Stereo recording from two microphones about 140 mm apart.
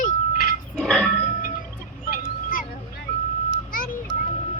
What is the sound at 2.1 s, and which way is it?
Vehicle, 75° left (ahead or behind).